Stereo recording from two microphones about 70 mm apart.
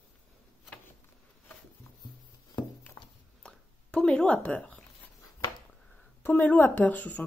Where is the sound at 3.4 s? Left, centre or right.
Centre.